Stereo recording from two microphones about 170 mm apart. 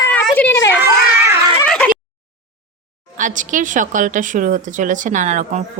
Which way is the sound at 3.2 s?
50° right (ahead or behind).